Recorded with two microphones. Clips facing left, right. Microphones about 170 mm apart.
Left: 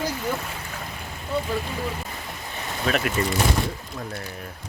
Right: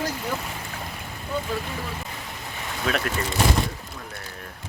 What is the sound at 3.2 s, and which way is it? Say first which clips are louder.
Speech: left 5 dB; 20° left (ahead or behind).